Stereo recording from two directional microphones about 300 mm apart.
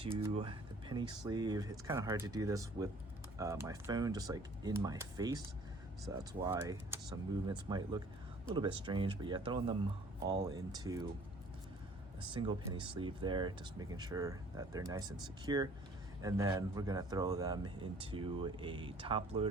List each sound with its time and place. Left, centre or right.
0.0 s speech: centre
6.4 s speech: centre
12.3 s speech: centre